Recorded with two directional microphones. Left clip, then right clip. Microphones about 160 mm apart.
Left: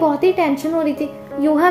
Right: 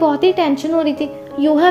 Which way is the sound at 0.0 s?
10° right (ahead or behind).